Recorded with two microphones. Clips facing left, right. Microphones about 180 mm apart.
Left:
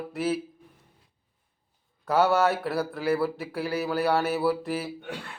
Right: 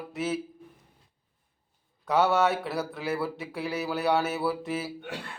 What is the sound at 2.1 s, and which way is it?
Mantra, centre (ahead or behind).